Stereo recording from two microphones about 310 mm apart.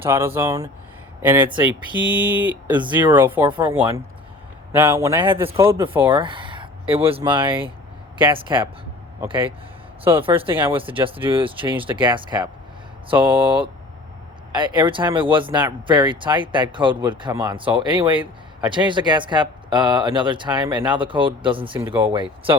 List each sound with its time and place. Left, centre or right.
0.0 s speech: centre